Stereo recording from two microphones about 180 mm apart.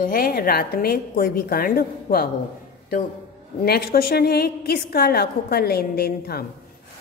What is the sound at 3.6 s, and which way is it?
A woman's voice, 60° left (ahead or behind).